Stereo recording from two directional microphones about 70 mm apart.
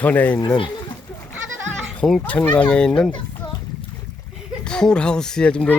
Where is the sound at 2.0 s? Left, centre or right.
Centre.